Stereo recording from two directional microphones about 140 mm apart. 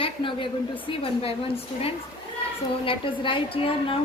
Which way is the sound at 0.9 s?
40° left (ahead or behind).